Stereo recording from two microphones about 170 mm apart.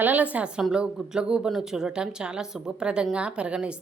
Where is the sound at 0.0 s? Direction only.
10° right (ahead or behind).